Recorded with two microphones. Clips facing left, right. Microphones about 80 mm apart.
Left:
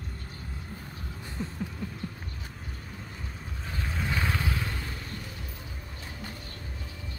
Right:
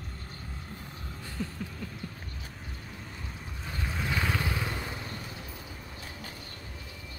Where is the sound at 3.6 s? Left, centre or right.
Centre.